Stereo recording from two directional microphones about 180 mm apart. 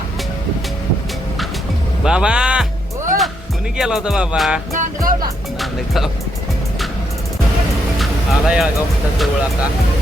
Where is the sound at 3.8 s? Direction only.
5° right (ahead or behind).